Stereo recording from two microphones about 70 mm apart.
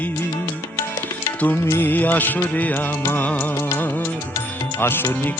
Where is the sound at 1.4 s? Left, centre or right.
Left.